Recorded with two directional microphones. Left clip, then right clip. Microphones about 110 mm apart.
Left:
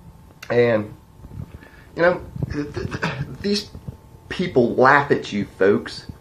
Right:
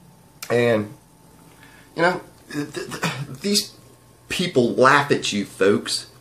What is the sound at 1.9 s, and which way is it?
A man's voice, 15° right (ahead or behind).